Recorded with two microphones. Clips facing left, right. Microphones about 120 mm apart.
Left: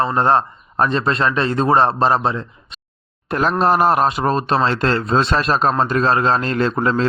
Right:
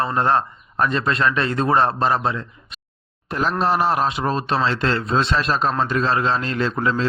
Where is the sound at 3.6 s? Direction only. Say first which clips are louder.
Left 4 dB; 55° left (ahead or behind).